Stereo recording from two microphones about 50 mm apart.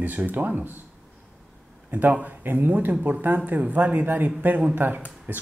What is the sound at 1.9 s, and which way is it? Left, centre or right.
Speech, right.